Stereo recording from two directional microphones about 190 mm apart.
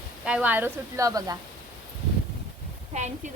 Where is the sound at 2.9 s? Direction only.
40° right (ahead or behind).